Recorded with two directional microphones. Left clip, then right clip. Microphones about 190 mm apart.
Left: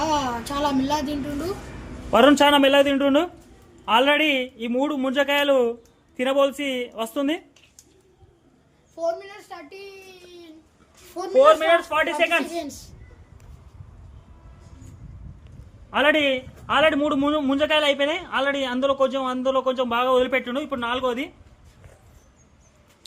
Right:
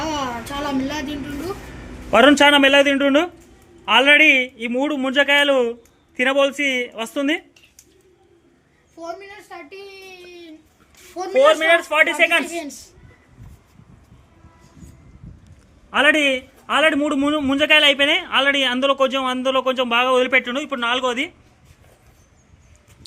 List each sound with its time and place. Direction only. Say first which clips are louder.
0.6 s a sound: left 2 dB; 70° left (ahead or behind)
2.0 s a man's voice: right 3 dB; centre (ahead or behind)
9.6 s a sound: right 3 dB; 75° left (ahead or behind)
11.4 s a man's voice: right 3 dB; 5° right (ahead or behind)
12.5 s a woman's voice: right 1 dB; 25° left (ahead or behind)
15.9 s a man's voice: right 3 dB; 10° right (ahead or behind)